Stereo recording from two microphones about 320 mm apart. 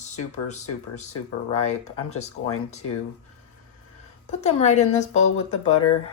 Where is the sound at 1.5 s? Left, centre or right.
Centre.